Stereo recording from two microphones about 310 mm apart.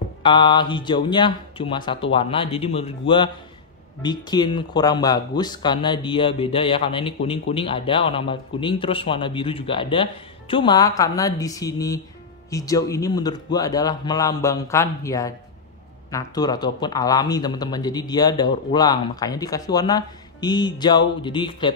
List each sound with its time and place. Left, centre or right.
0.2 s speech: centre